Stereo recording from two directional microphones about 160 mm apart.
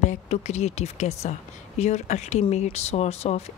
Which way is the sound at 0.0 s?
45° left (ahead or behind).